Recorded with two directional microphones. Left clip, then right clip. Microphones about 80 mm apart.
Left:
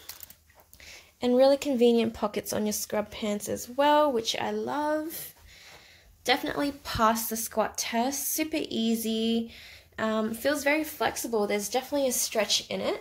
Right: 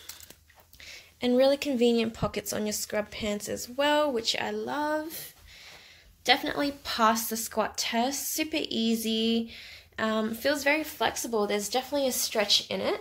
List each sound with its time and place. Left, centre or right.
0.8 s speech: left
12.1 s a woman's voice: centre
12.6 s speech: right